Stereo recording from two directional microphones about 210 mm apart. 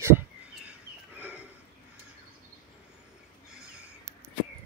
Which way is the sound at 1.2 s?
5° right (ahead or behind).